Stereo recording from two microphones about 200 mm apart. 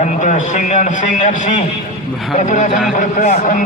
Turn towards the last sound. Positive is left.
turn(degrees=40)  # may be behind; listen again after turning